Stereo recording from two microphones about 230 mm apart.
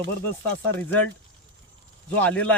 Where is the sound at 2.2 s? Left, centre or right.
Centre.